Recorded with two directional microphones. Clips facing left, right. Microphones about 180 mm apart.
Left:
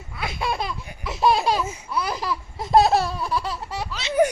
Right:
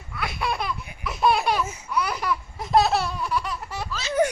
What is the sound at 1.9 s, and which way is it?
Laughter, 30° left (ahead or behind).